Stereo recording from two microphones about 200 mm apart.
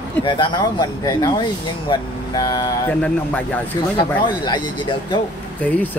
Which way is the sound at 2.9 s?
5° left (ahead or behind).